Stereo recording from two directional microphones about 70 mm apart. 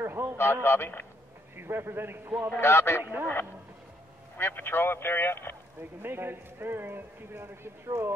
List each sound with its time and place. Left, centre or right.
0.0 s a sound: right
0.4 s speech: left
1.6 s speech: right
2.6 s speech: left
3.0 s speech: right
4.4 s speech: left
5.8 s speech: right